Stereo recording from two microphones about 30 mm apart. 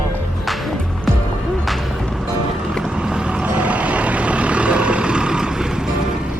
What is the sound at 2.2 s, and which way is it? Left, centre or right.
Music, right.